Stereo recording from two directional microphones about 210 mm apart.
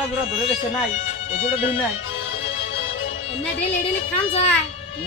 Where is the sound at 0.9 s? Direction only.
35° left (ahead or behind).